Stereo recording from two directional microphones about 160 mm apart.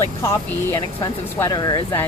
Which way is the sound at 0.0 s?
15° left (ahead or behind).